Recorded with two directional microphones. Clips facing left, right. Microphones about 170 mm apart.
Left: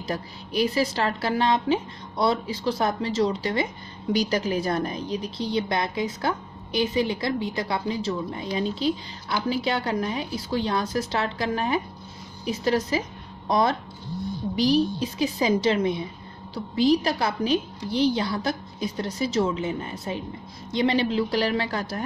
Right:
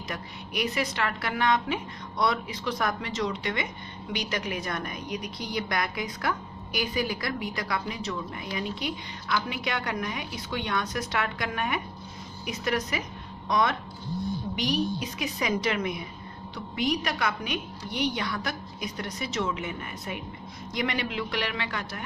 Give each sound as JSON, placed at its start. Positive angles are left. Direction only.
{"t": 0.0, "sound": "a woman's voice", "side_deg": 30}